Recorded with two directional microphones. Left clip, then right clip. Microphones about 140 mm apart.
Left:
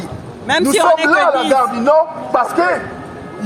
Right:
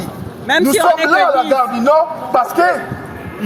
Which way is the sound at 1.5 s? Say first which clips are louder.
Even; 15° left (ahead or behind).